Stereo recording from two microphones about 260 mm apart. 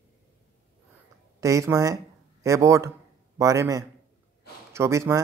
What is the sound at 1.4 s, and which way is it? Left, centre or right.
A man's voice, centre.